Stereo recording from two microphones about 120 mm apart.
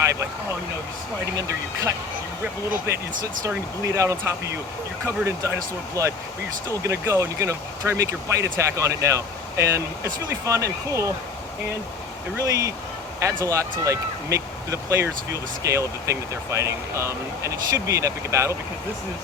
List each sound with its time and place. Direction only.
0.0 s speech: 25° right (ahead or behind)
1.4 s speech: 30° right (ahead or behind)
3.4 s speech: 25° right (ahead or behind)
12.4 s speech: 25° right (ahead or behind)